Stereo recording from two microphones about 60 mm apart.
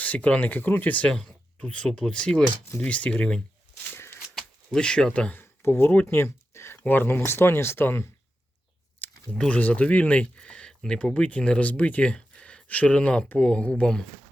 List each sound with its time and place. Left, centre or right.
0.0 s speech: left
1.1 s speech: centre
1.5 s speech: centre
3.9 s shuffling cards: left
4.4 s speech: centre
5.4 s a sound: left
6.1 s speech: left
6.8 s speech: left
9.0 s a sound: left
9.5 s speech: left